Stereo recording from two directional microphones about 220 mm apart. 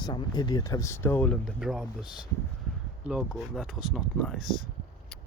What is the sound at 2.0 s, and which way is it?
Speech, 20° left (ahead or behind).